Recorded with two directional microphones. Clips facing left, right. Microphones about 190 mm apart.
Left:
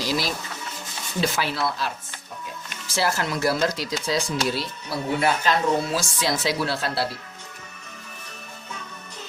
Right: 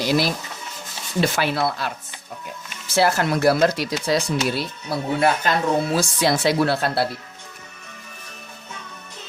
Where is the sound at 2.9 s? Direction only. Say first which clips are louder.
Right 6 dB; 60° right (ahead or behind).